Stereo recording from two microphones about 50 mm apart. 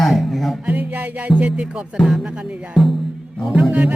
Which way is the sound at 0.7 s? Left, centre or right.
Right.